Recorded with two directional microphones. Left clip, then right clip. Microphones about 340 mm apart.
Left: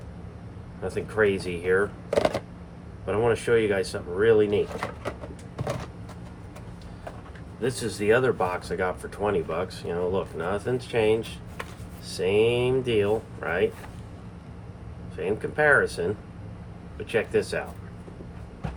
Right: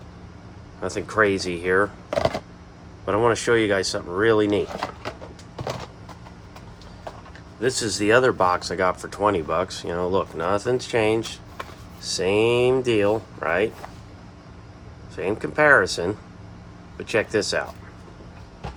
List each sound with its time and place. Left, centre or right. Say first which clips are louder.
0.9 s speech: right 3 dB; right
7.6 s speech: right 5 dB; right
15.2 s speech: right 4 dB; right
17.1 s speech: right 3 dB; right